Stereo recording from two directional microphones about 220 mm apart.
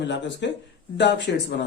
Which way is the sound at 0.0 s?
50° left (ahead or behind).